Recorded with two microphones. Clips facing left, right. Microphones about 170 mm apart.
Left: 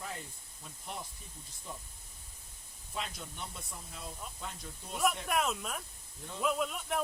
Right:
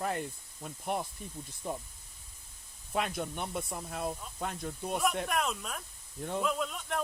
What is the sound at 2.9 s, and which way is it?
Speech, 60° right (ahead or behind).